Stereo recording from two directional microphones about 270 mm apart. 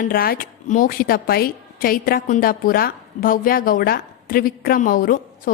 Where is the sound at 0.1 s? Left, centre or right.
Left.